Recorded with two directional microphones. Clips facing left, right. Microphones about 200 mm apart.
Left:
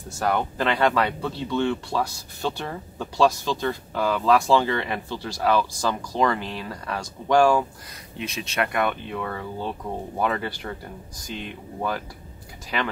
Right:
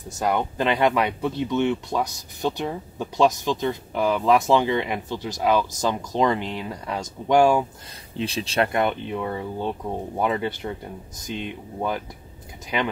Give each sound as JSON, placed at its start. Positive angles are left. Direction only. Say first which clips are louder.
{"t": 0.1, "sound": "speech", "louder": "right 1 dB", "side_deg": -20}
{"t": 8.2, "sound": "speech", "louder": "right 4 dB", "side_deg": -30}